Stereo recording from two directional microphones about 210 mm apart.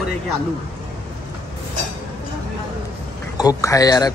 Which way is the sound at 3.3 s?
20° left (ahead or behind).